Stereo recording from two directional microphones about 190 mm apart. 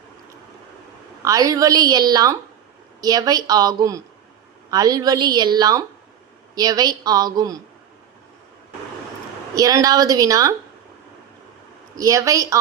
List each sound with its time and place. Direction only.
1.2 s a woman's voice: 20° right (ahead or behind)
9.6 s a woman's voice: 20° right (ahead or behind)
11.9 s a woman's voice: 15° right (ahead or behind)